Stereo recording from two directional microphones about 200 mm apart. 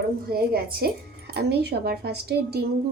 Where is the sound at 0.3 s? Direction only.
50° right (ahead or behind).